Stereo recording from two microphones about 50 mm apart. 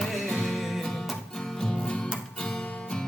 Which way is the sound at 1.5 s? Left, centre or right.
Centre.